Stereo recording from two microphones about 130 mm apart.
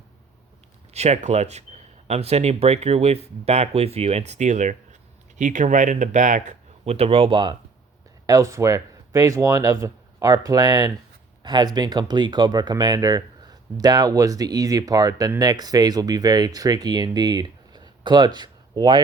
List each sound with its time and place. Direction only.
0.9 s speech: 60° right (ahead or behind); by 7.5 s 35° right (ahead or behind)
8.3 s speech: 25° right (ahead or behind)